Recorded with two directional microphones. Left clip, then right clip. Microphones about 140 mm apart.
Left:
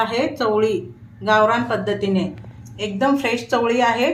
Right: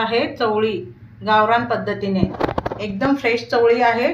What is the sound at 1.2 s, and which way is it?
A woman's voice, 60° left (ahead or behind).